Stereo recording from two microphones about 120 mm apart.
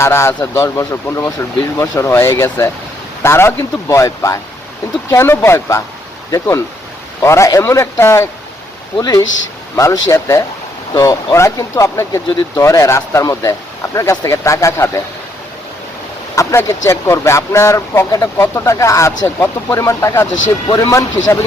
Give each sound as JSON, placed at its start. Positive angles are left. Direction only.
{"t": 0.0, "sound": "speech", "side_deg": 20}
{"t": 7.2, "sound": "speech", "side_deg": 25}
{"t": 16.3, "sound": "speech", "side_deg": 25}